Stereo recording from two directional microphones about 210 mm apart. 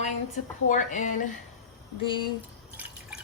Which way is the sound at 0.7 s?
35° left (ahead or behind).